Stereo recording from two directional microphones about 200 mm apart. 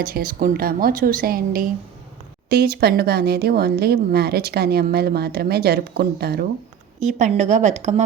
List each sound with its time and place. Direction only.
0.0 s speech: 45° right (ahead or behind)
7.0 s a woman's voice: 35° right (ahead or behind)